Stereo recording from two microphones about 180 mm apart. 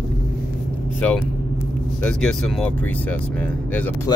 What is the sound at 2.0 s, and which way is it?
Speech, 5° left (ahead or behind).